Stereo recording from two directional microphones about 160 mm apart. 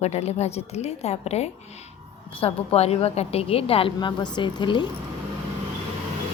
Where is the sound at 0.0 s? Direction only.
40° left (ahead or behind).